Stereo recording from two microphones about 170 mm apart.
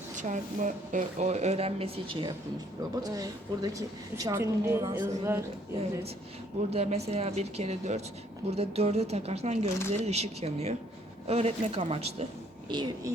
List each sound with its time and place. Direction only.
0.2 s speech: 50° right (ahead or behind); by 2.3 s 30° right (ahead or behind)
2.9 s a woman's voice: 20° right (ahead or behind)
6.7 s speech: 35° right (ahead or behind)
12.7 s a woman's voice: 25° right (ahead or behind)